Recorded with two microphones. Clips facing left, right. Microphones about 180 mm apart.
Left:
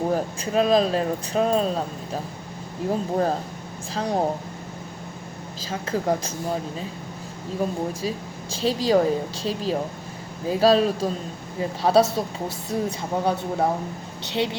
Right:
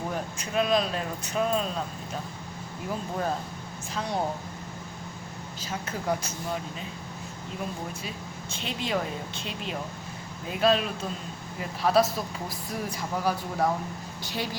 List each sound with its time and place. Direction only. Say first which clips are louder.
0.1 s a woman's voice: left 8 dB; 35° left (ahead or behind)
5.7 s a woman's voice: left 6 dB; 35° left (ahead or behind)